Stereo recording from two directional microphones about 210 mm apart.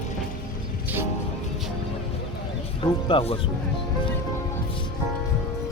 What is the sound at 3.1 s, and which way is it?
Speech, 25° left (ahead or behind).